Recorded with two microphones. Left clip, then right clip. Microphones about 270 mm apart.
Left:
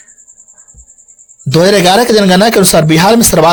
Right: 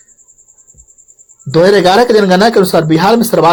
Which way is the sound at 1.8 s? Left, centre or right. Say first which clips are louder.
Even; left.